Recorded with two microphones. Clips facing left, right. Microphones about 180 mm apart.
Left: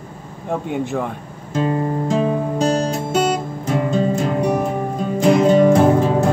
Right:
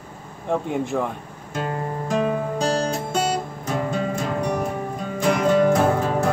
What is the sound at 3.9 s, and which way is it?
Music, 25° left (ahead or behind).